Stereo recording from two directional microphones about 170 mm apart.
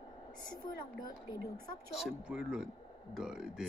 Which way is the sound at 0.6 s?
25° left (ahead or behind).